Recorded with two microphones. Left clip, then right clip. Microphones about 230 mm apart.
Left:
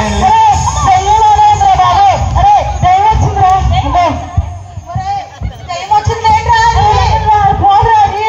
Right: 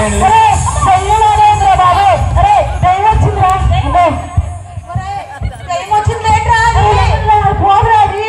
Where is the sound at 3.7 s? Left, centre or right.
Right.